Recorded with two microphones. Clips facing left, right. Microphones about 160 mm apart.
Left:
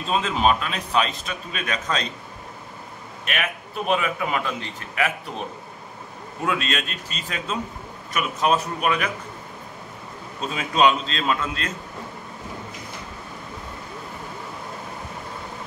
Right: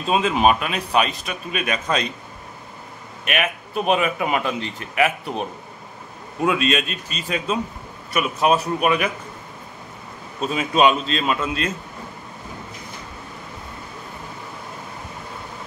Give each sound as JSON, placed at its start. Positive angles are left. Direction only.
{"t": 0.1, "sound": "a man's voice", "side_deg": -10}
{"t": 3.3, "sound": "a man's voice", "side_deg": -15}
{"t": 6.4, "sound": "a man's voice", "side_deg": -15}
{"t": 10.5, "sound": "a man's voice", "side_deg": -5}